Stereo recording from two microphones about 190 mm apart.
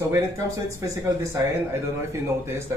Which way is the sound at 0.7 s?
15° right (ahead or behind).